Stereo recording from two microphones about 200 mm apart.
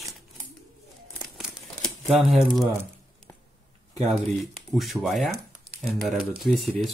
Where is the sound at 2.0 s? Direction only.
Centre (ahead or behind).